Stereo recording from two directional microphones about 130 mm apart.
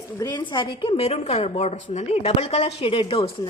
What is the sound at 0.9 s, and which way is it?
A woman's voice, 55° left (ahead or behind).